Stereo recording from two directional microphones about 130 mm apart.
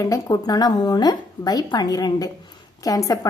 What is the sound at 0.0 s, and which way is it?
A woman's voice, 25° left (ahead or behind).